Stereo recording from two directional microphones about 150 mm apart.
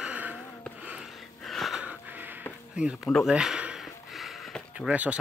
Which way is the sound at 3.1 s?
Centre (ahead or behind).